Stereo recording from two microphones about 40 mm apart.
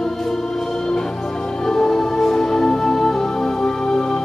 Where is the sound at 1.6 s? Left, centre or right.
Centre.